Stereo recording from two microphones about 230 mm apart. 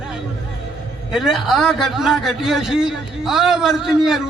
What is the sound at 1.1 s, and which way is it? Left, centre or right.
A man's voice, centre.